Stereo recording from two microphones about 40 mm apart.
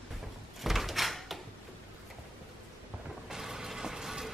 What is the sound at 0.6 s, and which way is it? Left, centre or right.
Door, centre.